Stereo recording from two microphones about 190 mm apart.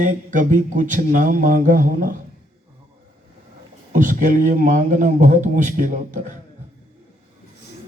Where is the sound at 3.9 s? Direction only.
40° right (ahead or behind).